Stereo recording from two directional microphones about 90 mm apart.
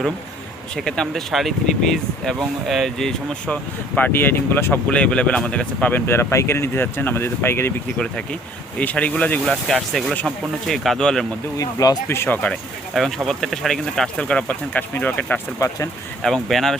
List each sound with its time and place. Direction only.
0.8 s speech: 5° left (ahead or behind)
6.1 s speech: 30° left (ahead or behind)
7.9 s speech: 10° left (ahead or behind)
11.5 s speech: 40° left (ahead or behind)
12.0 s speech: 30° left (ahead or behind)
12.9 s speech: centre (ahead or behind); by 15.4 s 20° left (ahead or behind)
15.5 s speech: 35° left (ahead or behind)
16.2 s speech: 5° left (ahead or behind)